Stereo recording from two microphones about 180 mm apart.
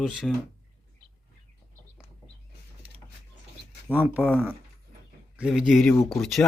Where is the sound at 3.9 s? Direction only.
10° right (ahead or behind).